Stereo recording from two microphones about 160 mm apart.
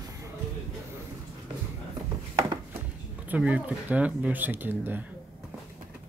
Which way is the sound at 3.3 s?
10° right (ahead or behind).